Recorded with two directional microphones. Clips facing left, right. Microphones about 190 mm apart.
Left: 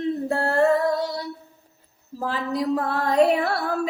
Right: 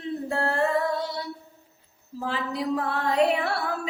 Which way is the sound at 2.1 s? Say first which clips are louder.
Left 4 dB; 40° left (ahead or behind).